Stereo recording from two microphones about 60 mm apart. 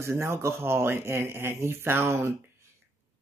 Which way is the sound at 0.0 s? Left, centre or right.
Right.